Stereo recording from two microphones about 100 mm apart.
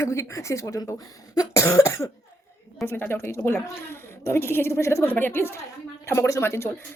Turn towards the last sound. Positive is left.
turn(degrees=25)  # may be behind; listen again after turning